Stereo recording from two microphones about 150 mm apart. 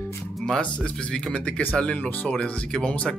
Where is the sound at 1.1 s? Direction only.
10° left (ahead or behind).